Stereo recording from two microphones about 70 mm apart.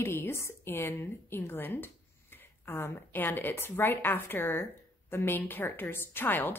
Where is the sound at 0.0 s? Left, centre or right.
Left.